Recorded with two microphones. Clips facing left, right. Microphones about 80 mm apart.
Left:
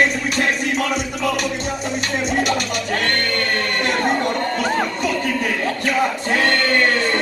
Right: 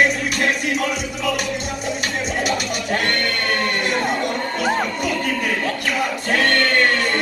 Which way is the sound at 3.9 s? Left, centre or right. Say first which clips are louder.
Left 2 dB; left.